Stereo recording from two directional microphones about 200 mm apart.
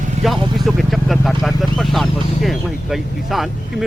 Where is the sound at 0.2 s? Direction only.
35° right (ahead or behind).